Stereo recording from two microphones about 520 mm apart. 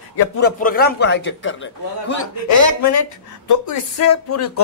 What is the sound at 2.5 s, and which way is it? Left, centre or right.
Speech, left.